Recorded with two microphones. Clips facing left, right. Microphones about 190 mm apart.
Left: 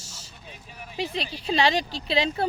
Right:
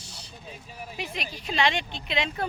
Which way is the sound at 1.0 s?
30° left (ahead or behind).